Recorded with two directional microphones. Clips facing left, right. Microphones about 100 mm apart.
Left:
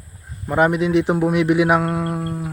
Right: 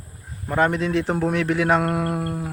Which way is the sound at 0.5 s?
15° left (ahead or behind).